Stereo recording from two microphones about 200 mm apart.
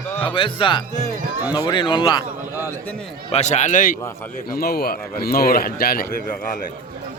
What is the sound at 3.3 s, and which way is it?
Speech, 35° left (ahead or behind).